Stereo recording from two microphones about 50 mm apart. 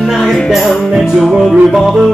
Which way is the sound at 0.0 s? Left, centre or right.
Centre.